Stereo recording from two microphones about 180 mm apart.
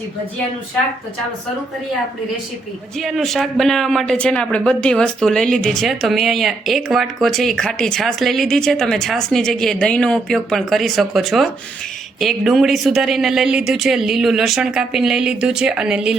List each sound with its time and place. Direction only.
3.0 s speech: centre (ahead or behind)